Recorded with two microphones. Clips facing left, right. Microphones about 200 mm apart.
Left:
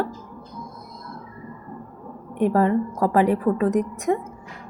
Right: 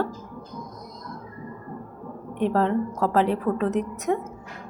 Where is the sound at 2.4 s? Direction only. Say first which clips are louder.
Left 3 dB; 10° left (ahead or behind).